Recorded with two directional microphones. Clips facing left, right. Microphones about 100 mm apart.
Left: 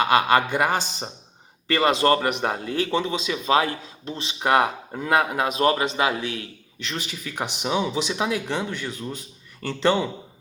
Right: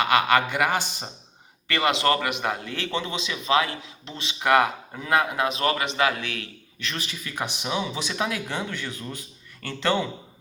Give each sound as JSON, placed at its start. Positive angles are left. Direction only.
{"t": 0.0, "sound": "a man's voice", "side_deg": 35}
{"t": 0.3, "sound": "a man's voice", "side_deg": 25}
{"t": 3.4, "sound": "a man's voice", "side_deg": 35}